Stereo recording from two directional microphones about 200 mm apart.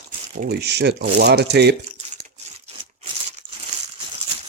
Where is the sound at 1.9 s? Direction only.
30° right (ahead or behind).